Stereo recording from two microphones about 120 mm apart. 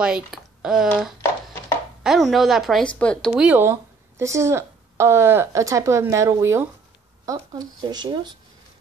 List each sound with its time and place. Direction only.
0.0 s a woman's voice: 5° right (ahead or behind)
3.3 s speech: 15° right (ahead or behind)
7.5 s speech: 35° right (ahead or behind)